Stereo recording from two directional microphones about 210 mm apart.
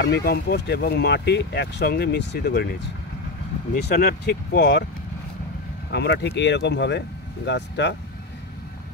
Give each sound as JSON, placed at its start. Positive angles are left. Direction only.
{"t": 0.0, "sound": "speech", "side_deg": 50}
{"t": 5.9, "sound": "speech", "side_deg": 55}